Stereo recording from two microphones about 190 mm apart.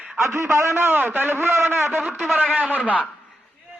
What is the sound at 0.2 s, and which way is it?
A man's voice, 15° right (ahead or behind).